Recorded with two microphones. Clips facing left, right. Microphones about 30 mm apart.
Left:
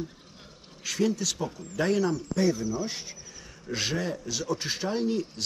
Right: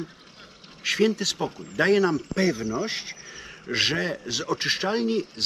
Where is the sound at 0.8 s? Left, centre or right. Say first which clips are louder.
Right 5 dB; right.